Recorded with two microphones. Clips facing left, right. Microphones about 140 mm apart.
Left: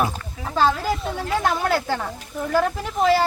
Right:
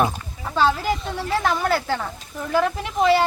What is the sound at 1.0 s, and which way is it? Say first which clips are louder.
A woman's voice: left 1 dB; centre (ahead or behind).